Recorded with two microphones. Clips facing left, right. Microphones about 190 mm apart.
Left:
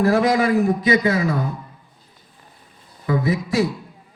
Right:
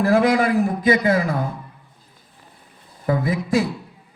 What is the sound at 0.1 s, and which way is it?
A man's voice, 55° right (ahead or behind).